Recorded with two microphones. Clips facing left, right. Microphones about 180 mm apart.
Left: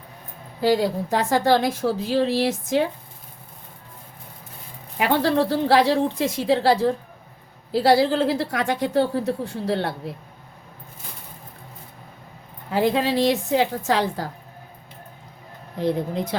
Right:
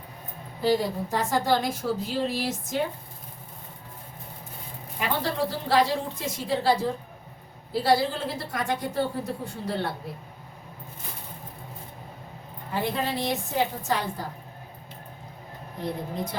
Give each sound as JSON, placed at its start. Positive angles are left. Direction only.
{"t": 0.6, "sound": "a woman's voice", "side_deg": 80}
{"t": 4.9, "sound": "a woman's voice", "side_deg": 75}
{"t": 12.7, "sound": "a woman's voice", "side_deg": 90}